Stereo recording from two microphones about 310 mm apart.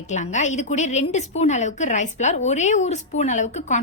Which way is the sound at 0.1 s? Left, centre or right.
Left.